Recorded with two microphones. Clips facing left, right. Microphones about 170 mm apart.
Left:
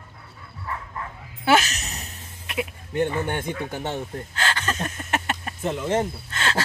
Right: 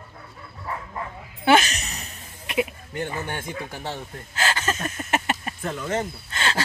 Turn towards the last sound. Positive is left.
turn(degrees=0)  # may be behind; listen again after turning